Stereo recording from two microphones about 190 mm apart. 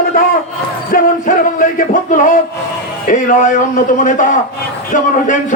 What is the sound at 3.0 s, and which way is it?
Speech, 40° left (ahead or behind).